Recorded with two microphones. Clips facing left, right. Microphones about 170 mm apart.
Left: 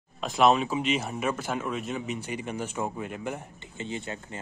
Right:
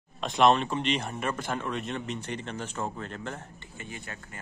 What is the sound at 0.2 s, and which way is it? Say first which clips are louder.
Speech: even; 5° left (ahead or behind).